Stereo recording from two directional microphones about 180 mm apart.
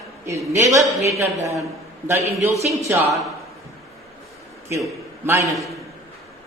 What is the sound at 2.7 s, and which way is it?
Speech, 15° right (ahead or behind).